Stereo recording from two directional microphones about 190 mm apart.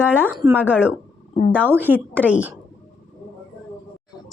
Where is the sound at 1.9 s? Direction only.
10° right (ahead or behind).